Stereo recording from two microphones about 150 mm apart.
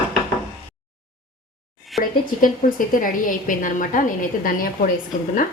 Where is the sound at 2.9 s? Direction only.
65° left (ahead or behind).